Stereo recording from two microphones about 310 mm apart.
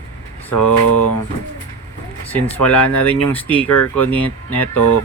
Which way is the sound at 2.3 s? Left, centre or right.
Centre.